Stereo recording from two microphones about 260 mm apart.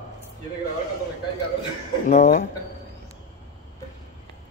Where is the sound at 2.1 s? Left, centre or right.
Left.